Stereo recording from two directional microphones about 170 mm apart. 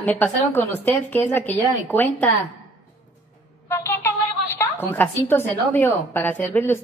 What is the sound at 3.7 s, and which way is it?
A woman's voice, 15° left (ahead or behind).